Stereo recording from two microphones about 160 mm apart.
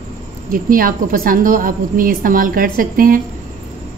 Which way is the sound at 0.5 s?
60° right (ahead or behind).